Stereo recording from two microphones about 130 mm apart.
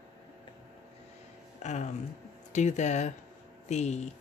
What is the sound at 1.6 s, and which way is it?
Speech, 60° left (ahead or behind).